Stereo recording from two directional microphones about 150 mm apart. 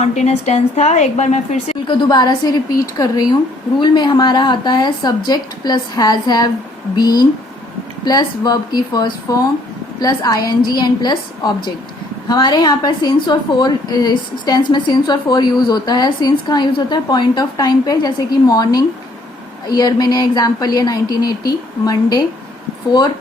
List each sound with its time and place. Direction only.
0.0 s a woman's voice: 50° left (ahead or behind)
1.9 s a woman's voice: 30° left (ahead or behind)
8.0 s a woman's voice: 25° left (ahead or behind)